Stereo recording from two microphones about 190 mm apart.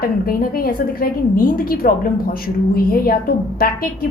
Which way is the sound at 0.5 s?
50° left (ahead or behind).